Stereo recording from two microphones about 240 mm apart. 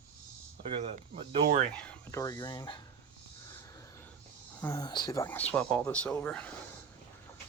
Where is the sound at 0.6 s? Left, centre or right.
Right.